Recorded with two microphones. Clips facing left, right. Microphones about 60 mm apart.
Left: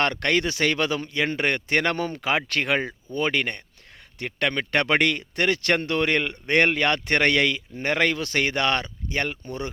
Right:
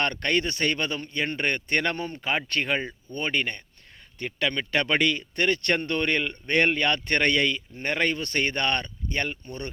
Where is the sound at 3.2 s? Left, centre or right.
Left.